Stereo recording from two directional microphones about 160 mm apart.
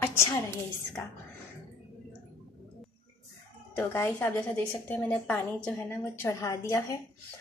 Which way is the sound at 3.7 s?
15° left (ahead or behind).